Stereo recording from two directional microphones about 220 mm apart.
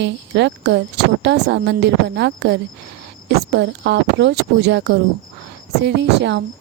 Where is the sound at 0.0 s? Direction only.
50° right (ahead or behind).